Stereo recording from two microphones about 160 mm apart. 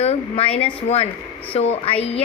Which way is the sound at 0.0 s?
40° left (ahead or behind).